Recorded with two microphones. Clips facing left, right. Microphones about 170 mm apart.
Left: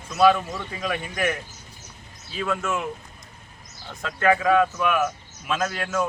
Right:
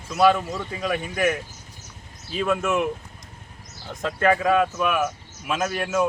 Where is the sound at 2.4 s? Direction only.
15° right (ahead or behind).